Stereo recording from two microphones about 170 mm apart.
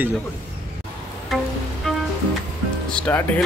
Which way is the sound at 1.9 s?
Centre (ahead or behind).